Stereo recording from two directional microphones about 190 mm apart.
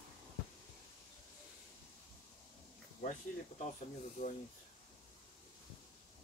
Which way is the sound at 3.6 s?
40° left (ahead or behind).